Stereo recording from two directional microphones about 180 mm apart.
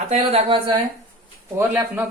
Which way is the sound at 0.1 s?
35° right (ahead or behind).